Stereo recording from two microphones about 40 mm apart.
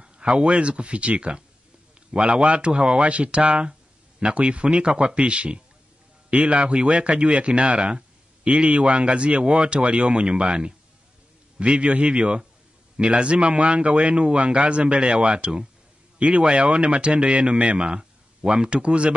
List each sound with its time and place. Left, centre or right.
0.0 s a man's voice: right
17.8 s a sound: centre
18.7 s a man's voice: right